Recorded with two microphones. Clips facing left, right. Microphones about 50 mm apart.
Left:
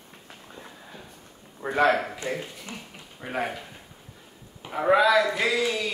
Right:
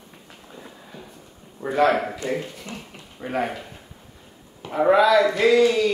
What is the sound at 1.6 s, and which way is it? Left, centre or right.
Speech, left.